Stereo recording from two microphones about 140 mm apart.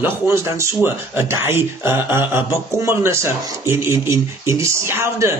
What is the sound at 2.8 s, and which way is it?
Speech, 20° right (ahead or behind).